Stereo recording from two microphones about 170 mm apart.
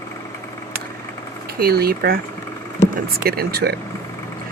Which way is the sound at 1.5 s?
60° right (ahead or behind).